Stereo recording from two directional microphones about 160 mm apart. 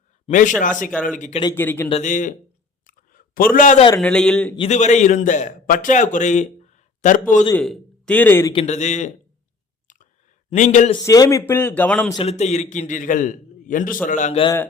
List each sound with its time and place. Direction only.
0.3 s a man's voice: 50° left (ahead or behind)
1.5 s a man's voice: 10° left (ahead or behind)
1.9 s a man's voice: 50° left (ahead or behind)
2.8 s a sound: 60° left (ahead or behind)
4.0 s a man's voice: 5° left (ahead or behind)
4.5 s a man's voice: 40° left (ahead or behind)
7.5 s speech: 5° left (ahead or behind)
8.5 s a man's voice: 45° left (ahead or behind)
9.8 s chewing: 50° left (ahead or behind)
10.5 s a man's voice: 50° left (ahead or behind)
11.0 s a man's voice: 20° left (ahead or behind)
12.1 s a man's voice: 40° left (ahead or behind)